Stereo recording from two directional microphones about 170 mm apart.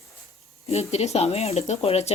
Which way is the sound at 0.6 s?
40° left (ahead or behind).